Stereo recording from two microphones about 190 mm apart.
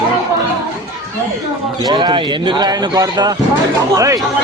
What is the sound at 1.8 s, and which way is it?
Speech, 20° right (ahead or behind).